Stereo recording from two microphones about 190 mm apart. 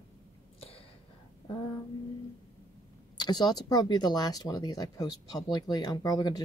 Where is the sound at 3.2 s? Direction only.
20° left (ahead or behind).